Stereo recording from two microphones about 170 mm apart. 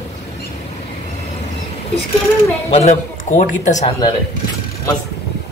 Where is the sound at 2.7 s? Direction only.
40° left (ahead or behind).